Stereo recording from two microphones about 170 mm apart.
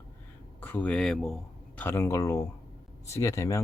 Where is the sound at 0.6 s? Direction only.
10° left (ahead or behind).